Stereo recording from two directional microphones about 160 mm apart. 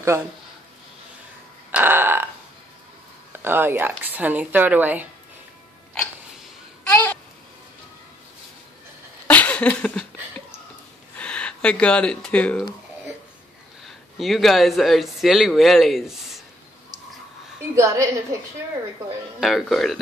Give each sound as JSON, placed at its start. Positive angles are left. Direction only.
{"t": 1.7, "sound": "burping", "side_deg": -10}
{"t": 3.3, "sound": "speech", "side_deg": -15}
{"t": 6.9, "sound": "babbling", "side_deg": 15}
{"t": 9.3, "sound": "a sound", "side_deg": 10}
{"t": 11.1, "sound": "speech", "side_deg": 5}
{"t": 13.8, "sound": "speech", "side_deg": 0}
{"t": 17.7, "sound": "speech", "side_deg": -20}
{"t": 19.4, "sound": "speech", "side_deg": 0}